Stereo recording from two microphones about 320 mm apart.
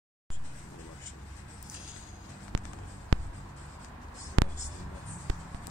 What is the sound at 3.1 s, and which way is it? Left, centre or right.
Writing, right.